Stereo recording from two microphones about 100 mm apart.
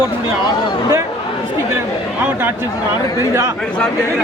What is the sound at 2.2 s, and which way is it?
Speech, 20° right (ahead or behind).